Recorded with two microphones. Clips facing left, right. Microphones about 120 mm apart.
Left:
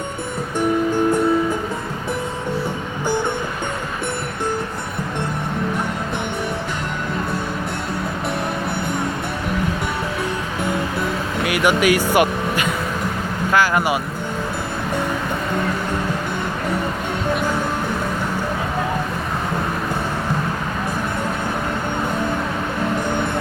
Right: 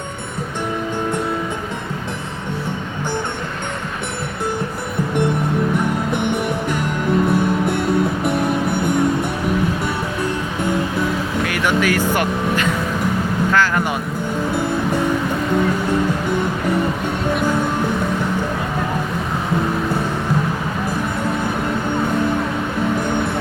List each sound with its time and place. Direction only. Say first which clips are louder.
11.4 s speech: left 3 dB; 15° left (ahead or behind)
13.5 s vehicle: left 2 dB; 10° left (ahead or behind)